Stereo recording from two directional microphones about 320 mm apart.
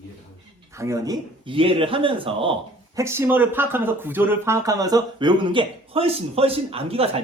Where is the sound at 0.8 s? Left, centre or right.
Centre.